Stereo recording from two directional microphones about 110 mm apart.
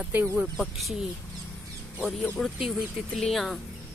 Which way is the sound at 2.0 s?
5° left (ahead or behind).